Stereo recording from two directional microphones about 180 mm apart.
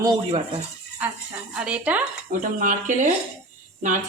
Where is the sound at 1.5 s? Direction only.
5° right (ahead or behind).